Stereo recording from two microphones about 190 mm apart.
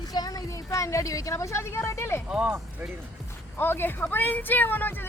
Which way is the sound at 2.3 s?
5° right (ahead or behind).